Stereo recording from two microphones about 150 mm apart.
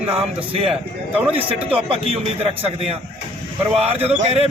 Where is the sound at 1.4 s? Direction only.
40° right (ahead or behind).